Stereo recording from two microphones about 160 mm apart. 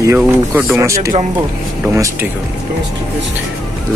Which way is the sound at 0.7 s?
20° right (ahead or behind).